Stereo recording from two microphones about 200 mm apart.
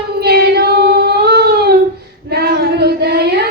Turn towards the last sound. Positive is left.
turn(degrees=-55)  # may be behind; listen again after turning